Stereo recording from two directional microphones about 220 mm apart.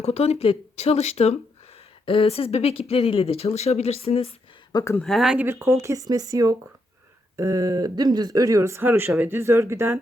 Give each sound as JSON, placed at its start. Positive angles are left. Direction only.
{"t": 0.0, "sound": "speech", "side_deg": 30}
{"t": 4.8, "sound": "speech", "side_deg": 10}
{"t": 5.0, "sound": "speech", "side_deg": 0}